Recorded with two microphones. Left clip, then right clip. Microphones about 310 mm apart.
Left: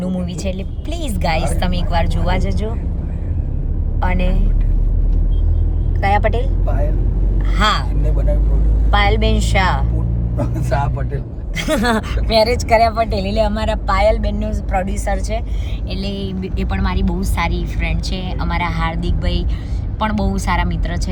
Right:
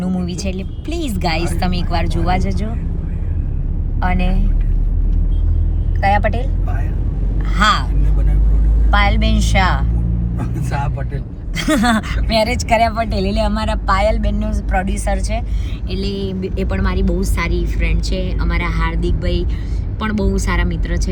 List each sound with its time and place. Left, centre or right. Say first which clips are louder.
0.0 s speech: even; centre
4.0 s speech: right 1 dB; centre
6.0 s speech: right 1 dB; centre
7.5 s speech: right 2 dB; centre
10.3 s speech: left 5 dB; left
11.5 s speech: right 1 dB; centre